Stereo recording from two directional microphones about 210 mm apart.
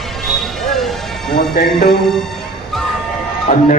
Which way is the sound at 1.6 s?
45° left (ahead or behind).